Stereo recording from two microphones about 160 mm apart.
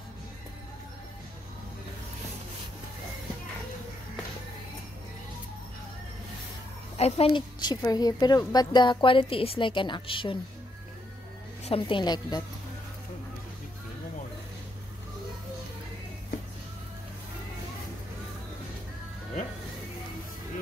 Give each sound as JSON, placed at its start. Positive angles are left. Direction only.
{"t": 7.0, "sound": "a woman's voice", "side_deg": 40}
{"t": 11.6, "sound": "a woman's voice", "side_deg": 35}